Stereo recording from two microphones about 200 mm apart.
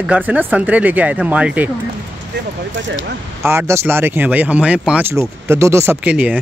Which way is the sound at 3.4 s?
15° right (ahead or behind).